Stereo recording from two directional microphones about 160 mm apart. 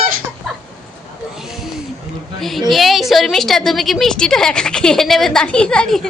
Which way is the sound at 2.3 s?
Centre (ahead or behind).